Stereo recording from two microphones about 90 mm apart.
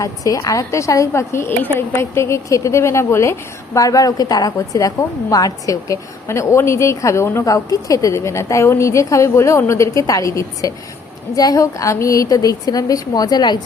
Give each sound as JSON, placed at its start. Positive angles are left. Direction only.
{"t": 0.0, "sound": "a woman's voice", "side_deg": 40}
{"t": 3.8, "sound": "a woman's voice", "side_deg": 40}